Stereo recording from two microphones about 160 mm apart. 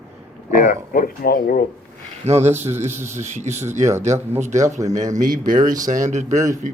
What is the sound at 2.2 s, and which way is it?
Speech, 40° right (ahead or behind).